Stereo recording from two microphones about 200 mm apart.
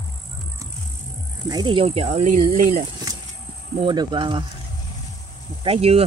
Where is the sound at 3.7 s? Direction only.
25° right (ahead or behind).